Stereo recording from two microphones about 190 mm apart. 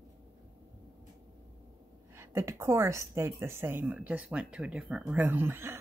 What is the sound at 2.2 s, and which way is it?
A woman's voice, 15° right (ahead or behind).